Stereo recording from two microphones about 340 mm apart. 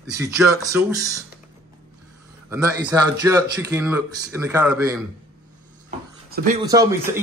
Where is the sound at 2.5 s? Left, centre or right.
Centre.